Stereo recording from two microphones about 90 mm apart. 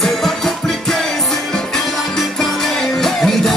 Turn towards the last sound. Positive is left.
turn(degrees=5)  # may be behind; listen again after turning